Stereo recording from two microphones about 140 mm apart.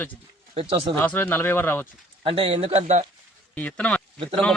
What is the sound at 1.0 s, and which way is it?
Speech, 15° left (ahead or behind).